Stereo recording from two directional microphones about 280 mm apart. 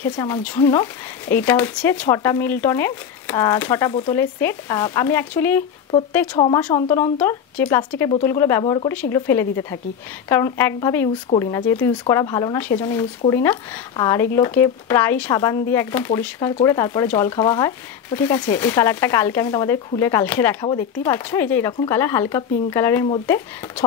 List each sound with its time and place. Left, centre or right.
0.0 s speech: centre